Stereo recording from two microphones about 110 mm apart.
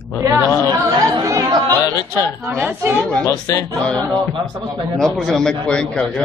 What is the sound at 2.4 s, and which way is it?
Speech, 20° right (ahead or behind).